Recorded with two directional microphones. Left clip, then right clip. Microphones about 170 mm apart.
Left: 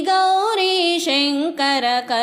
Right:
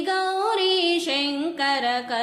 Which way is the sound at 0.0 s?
40° left (ahead or behind).